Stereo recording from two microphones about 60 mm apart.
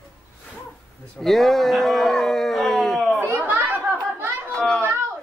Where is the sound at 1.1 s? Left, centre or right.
Centre.